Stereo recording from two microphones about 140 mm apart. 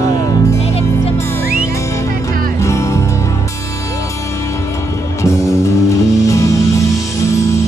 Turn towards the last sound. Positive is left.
turn(degrees=20)  # may be behind; listen again after turning